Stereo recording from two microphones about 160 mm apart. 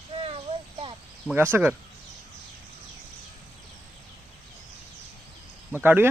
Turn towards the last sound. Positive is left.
turn(degrees=-10)  # may be behind; listen again after turning